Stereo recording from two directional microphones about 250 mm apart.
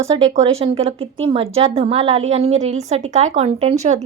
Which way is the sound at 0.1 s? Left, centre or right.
Centre.